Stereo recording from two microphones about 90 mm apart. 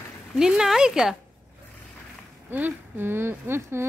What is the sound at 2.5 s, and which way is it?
Speech, 20° right (ahead or behind).